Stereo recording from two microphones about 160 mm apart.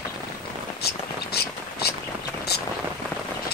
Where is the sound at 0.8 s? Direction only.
80° left.